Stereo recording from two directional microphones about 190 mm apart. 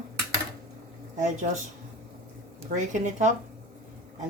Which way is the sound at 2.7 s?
40° right (ahead or behind).